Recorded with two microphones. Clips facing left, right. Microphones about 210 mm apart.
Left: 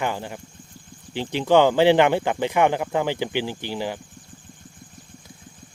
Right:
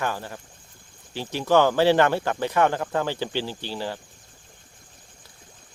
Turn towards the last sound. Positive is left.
turn(degrees=15)  # may be behind; listen again after turning